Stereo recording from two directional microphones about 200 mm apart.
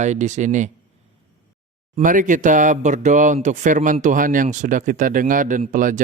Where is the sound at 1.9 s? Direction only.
40° right (ahead or behind).